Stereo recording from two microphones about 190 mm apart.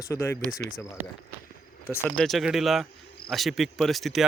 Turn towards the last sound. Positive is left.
turn(degrees=0)  # may be behind; listen again after turning